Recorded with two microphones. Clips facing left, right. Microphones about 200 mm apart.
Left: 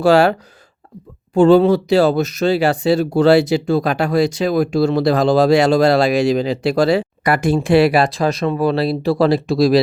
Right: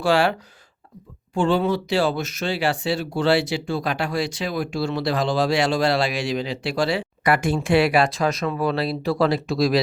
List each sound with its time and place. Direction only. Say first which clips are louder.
0.0 s speech: left 7 dB; 40° left (ahead or behind)
1.4 s speech: left 10 dB; 40° left (ahead or behind)